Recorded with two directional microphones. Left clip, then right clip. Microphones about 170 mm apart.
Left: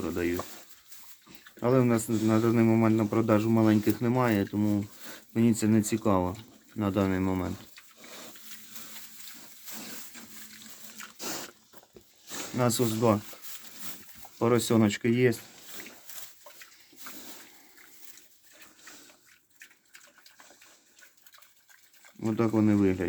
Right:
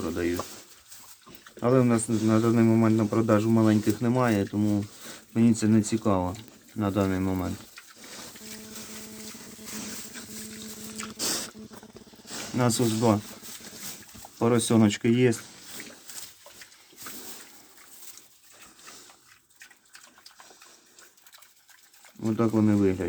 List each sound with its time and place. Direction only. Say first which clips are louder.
0.0 s speech: right 2 dB; 10° left (ahead or behind)
1.5 s speech: right 2 dB; 5° left (ahead or behind)
10.9 s squish: right 8 dB; 15° right (ahead or behind)
12.5 s speech: right 2 dB; centre (ahead or behind)
14.3 s speech: right 2 dB; 5° left (ahead or behind)
22.2 s speech: right 1 dB; 10° left (ahead or behind)